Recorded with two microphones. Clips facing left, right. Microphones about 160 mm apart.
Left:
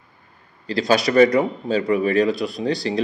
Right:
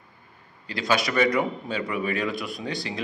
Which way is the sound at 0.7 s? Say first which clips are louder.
Left 6 dB; 35° left (ahead or behind).